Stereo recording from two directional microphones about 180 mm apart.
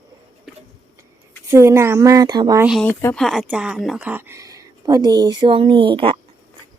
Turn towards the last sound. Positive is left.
turn(degrees=-30)  # may be behind; listen again after turning